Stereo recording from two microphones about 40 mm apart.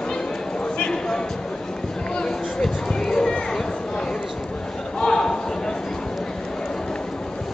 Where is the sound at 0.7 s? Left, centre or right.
Centre.